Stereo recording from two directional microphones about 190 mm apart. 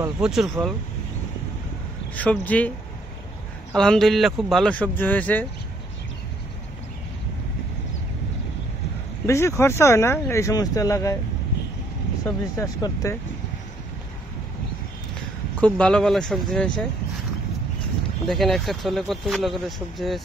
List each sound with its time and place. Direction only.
0.0 s speech: 5° right (ahead or behind)
2.1 s speech: 10° left (ahead or behind)
3.7 s speech: 5° left (ahead or behind)
9.2 s speech: 15° left (ahead or behind)
12.5 s speech: 15° left (ahead or behind)
15.6 s speech: 5° left (ahead or behind)
18.3 s speech: centre (ahead or behind)